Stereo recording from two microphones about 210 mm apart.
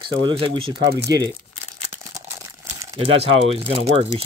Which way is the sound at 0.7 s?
55° right (ahead or behind).